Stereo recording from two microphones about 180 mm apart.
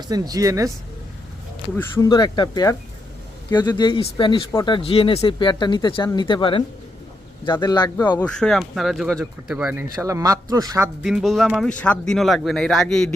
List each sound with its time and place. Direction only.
0.1 s speech: 20° right (ahead or behind)
1.7 s speech: 15° left (ahead or behind)
8.2 s speech: 5° left (ahead or behind)
10.0 s speech: 15° right (ahead or behind)
11.0 s speech: centre (ahead or behind)